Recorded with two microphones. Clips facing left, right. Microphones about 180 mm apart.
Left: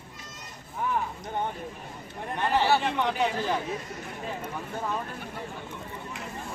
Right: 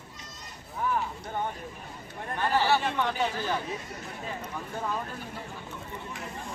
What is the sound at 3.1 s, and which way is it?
Speech, centre (ahead or behind).